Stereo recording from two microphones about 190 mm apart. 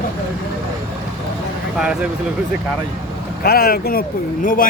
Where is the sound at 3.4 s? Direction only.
55° left (ahead or behind).